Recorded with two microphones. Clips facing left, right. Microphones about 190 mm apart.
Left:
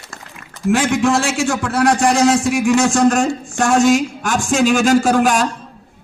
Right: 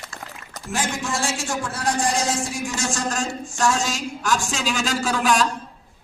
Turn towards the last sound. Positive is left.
turn(degrees=50)  # may be behind; listen again after turning